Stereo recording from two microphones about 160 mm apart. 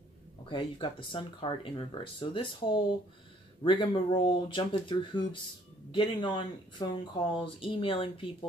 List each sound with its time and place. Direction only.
0.5 s speech: 30° left (ahead or behind)